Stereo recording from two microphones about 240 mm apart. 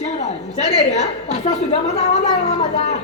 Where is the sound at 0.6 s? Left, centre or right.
Left.